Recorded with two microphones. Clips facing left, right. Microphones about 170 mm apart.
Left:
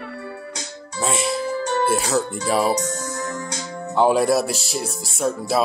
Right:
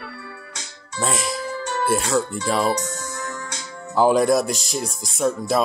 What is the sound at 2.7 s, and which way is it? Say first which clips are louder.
Music: left 3 dB; 35° left (ahead or behind).